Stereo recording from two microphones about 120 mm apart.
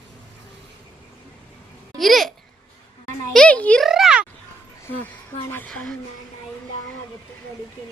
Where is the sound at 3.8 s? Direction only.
5° right (ahead or behind).